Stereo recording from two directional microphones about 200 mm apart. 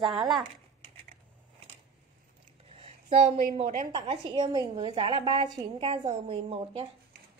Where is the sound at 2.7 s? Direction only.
35° right (ahead or behind).